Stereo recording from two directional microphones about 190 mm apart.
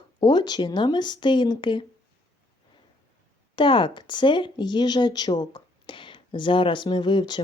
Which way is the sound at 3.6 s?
25° left (ahead or behind).